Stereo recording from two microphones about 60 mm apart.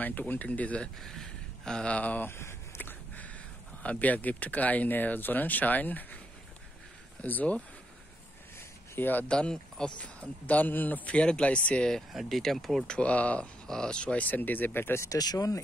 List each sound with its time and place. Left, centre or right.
0.0 s speech: left
1.0 s speech: centre; by 2.2 s left
2.2 s a sound: left
2.8 s a sound: left
3.8 s speech: left
7.2 s speech: left
8.5 s a sound: left
9.3 s speech: centre
12.1 s speech: centre
12.9 s speech: left
15.0 s speech: left